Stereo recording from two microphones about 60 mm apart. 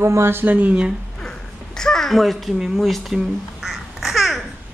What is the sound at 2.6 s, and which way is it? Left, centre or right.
Speech, centre.